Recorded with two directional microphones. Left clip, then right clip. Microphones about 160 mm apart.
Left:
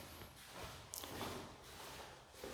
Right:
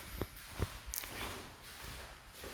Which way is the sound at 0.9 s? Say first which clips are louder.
Right 6 dB; 20° left (ahead or behind).